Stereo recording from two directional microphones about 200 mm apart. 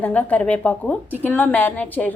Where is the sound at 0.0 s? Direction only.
5° left (ahead or behind).